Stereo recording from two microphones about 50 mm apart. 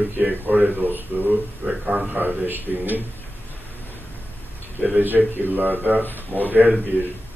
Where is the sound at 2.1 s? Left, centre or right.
Right.